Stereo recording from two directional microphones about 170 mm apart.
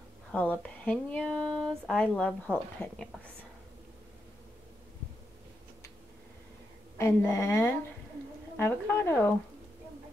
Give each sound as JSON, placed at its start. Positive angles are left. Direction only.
{"t": 0.3, "sound": "speech", "side_deg": 10}
{"t": 7.0, "sound": "a woman's voice", "side_deg": 15}